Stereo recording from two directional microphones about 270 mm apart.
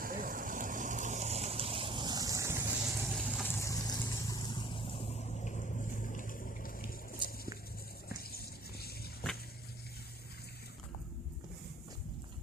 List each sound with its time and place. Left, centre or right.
0.0 s vehicle: right; by 3.5 s centre
3.5 s vehicle: centre; by 6.8 s left
8.1 s water: left
9.2 s a sound: centre